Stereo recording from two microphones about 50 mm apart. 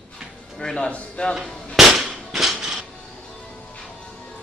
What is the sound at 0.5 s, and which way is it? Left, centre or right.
Speech, centre.